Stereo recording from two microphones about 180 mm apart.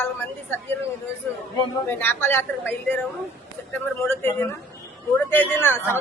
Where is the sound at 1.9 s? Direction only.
10° left (ahead or behind).